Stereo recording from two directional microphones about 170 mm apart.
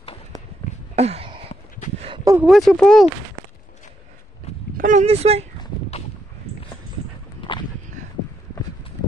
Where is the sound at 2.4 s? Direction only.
Centre (ahead or behind).